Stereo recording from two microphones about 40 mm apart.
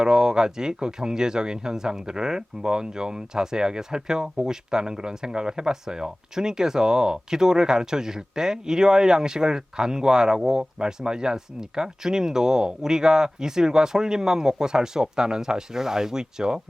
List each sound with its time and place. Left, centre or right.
0.0 s speech: centre